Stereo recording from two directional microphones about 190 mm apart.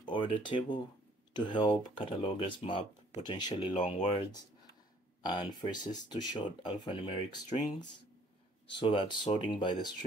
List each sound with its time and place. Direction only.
0.0 s speech: 25° left (ahead or behind)
3.7 s speech: 40° left (ahead or behind)
5.2 s speech: 20° left (ahead or behind)
8.7 s speech: 25° left (ahead or behind)